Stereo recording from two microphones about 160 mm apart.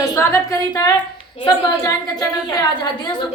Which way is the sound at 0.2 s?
20° left (ahead or behind).